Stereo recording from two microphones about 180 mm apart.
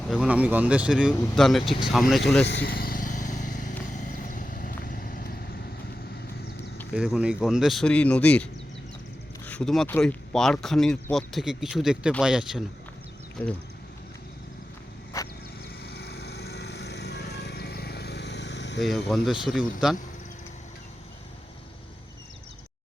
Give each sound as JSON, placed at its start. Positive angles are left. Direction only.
{"t": 0.1, "sound": "speech", "side_deg": -5}
{"t": 2.5, "sound": "vehicle", "side_deg": 65}
{"t": 6.9, "sound": "speech", "side_deg": 0}
{"t": 9.5, "sound": "speech", "side_deg": 5}
{"t": 13.4, "sound": "speech", "side_deg": 10}
{"t": 15.1, "sound": "vehicle", "side_deg": 15}
{"t": 15.8, "sound": "vehicle", "side_deg": 65}
{"t": 18.8, "sound": "speech", "side_deg": 0}